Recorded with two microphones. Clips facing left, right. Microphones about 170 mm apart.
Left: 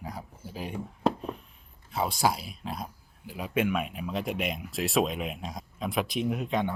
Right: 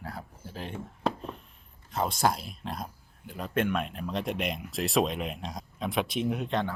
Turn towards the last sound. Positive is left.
turn(degrees=0)  # may be behind; listen again after turning